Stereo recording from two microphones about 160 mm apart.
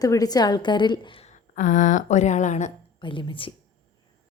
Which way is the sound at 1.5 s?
50° left (ahead or behind).